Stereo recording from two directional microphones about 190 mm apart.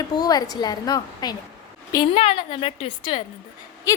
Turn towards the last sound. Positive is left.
turn(degrees=15)  # may be behind; listen again after turning